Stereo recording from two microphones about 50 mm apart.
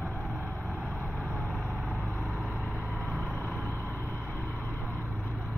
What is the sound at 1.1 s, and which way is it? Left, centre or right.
Vehicle, centre.